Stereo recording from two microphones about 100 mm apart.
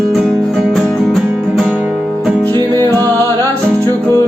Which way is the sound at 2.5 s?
40° right (ahead or behind).